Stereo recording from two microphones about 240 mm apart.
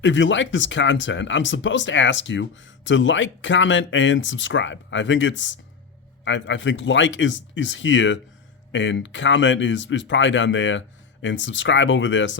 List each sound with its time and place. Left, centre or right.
0.0 s speech: left